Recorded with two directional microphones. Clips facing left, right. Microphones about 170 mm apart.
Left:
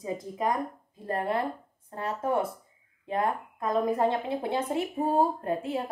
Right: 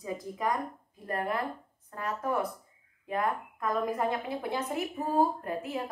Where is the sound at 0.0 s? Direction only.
25° left (ahead or behind).